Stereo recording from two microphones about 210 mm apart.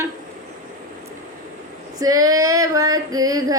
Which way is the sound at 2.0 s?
15° right (ahead or behind).